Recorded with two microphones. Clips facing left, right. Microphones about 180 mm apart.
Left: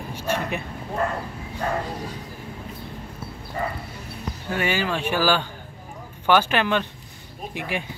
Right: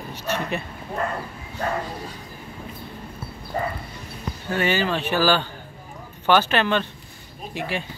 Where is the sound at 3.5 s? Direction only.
35° right (ahead or behind).